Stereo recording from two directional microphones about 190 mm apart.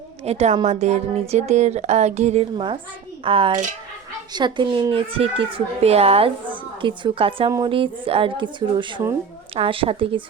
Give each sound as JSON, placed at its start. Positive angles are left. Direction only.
{"t": 0.3, "sound": "a child's voice", "side_deg": -35}